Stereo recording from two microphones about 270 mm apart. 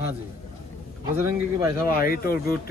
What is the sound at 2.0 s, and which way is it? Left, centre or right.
Speech, left.